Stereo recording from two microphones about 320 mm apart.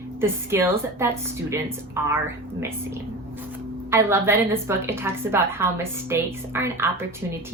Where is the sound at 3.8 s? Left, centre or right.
Centre.